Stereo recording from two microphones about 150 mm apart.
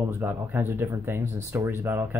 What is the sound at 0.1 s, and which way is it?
Speech, 15° right (ahead or behind).